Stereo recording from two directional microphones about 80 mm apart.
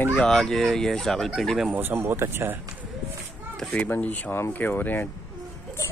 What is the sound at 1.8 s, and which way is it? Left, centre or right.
Speech, right.